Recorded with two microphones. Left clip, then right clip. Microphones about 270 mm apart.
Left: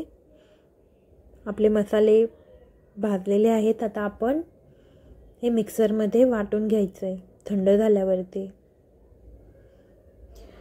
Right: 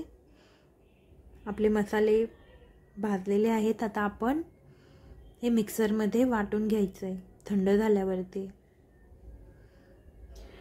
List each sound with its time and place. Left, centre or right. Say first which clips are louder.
1.4 s a woman's voice: left 6 dB; centre
5.4 s a woman's voice: left 6 dB; centre